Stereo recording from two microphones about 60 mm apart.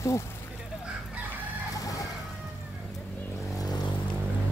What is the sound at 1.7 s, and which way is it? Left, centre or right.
Vehicle, left.